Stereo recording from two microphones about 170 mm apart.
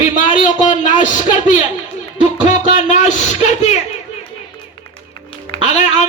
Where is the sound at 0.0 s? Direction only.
45° left (ahead or behind).